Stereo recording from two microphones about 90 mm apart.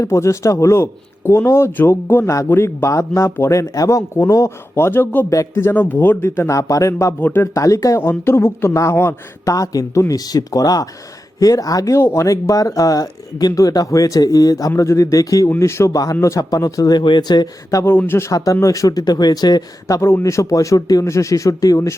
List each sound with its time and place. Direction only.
0.0 s a man's voice: 35° left (ahead or behind)
6.6 s speech: 40° left (ahead or behind)
7.2 s a man's voice: 25° left (ahead or behind); by 15.4 s 40° left (ahead or behind)
15.4 s speech: 30° left (ahead or behind)
17.0 s speech: 55° left (ahead or behind)
17.8 s a man's voice: 25° left (ahead or behind)
18.3 s speech: 40° left (ahead or behind)
20.0 s speech: 30° left (ahead or behind)